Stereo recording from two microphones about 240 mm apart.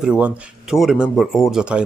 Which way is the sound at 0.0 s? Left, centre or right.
Centre.